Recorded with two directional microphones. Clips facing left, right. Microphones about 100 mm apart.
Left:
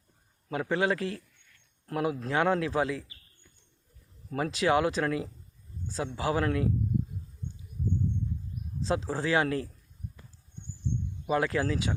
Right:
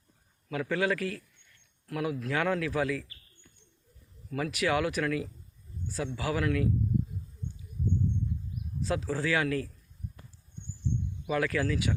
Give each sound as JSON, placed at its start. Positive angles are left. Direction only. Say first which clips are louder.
{"t": 0.4, "sound": "a man's voice", "louder": "left 1 dB", "side_deg": 30}
{"t": 4.3, "sound": "a man's voice", "louder": "left 3 dB", "side_deg": 30}
{"t": 8.8, "sound": "a man's voice", "louder": "left 1 dB", "side_deg": 25}
{"t": 11.3, "sound": "a man's voice", "louder": "left 1 dB", "side_deg": 25}